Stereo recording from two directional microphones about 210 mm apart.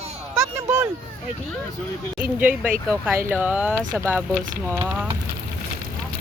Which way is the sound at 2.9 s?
10° right (ahead or behind).